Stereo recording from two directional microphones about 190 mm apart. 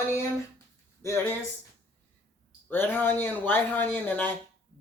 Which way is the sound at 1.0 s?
15° left (ahead or behind).